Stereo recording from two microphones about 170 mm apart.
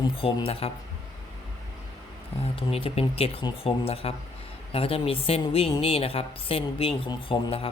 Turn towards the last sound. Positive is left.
turn(degrees=30)  # may be behind; listen again after turning